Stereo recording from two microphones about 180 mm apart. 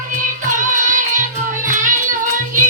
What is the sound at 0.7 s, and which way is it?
Music, 45° right (ahead or behind).